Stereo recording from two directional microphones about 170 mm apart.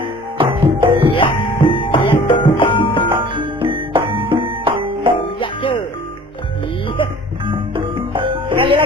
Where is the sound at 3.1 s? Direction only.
30° right (ahead or behind).